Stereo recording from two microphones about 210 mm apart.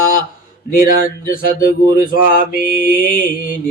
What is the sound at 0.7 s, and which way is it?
Mantra, 40° left (ahead or behind).